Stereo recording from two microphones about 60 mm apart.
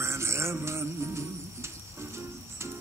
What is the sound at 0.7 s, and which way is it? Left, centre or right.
Music, right.